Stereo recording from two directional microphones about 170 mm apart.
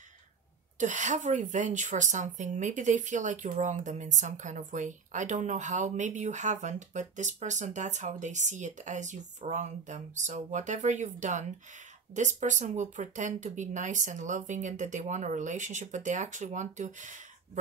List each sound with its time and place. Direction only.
0.7 s a woman's voice: 45° right (ahead or behind)